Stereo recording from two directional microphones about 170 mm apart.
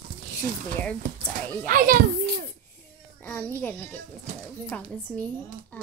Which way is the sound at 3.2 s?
10° left (ahead or behind).